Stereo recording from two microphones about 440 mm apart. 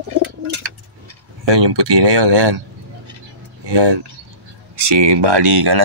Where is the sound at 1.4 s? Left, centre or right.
Right.